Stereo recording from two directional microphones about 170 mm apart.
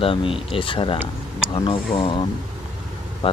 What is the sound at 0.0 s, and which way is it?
Speech, 30° left (ahead or behind).